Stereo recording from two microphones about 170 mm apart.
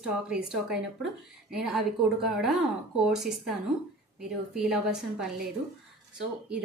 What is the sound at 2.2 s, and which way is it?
A woman's voice, centre (ahead or behind).